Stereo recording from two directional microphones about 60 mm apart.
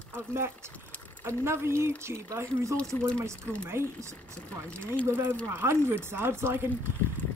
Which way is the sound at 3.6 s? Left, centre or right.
Right.